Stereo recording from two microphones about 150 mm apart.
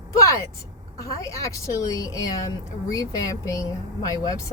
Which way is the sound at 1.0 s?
20° left (ahead or behind).